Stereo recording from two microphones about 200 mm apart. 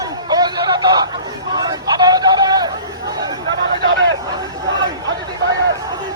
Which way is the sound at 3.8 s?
65° right (ahead or behind).